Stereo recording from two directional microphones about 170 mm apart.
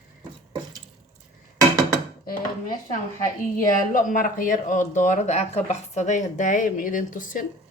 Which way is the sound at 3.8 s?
50° left (ahead or behind).